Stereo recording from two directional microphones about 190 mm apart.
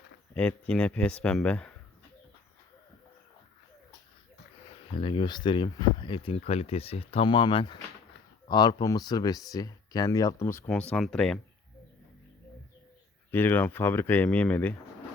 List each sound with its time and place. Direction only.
0.3 s speech: 5° left (ahead or behind)
4.9 s speech: 25° left (ahead or behind); by 11.3 s 5° left (ahead or behind)
13.3 s speech: 10° left (ahead or behind)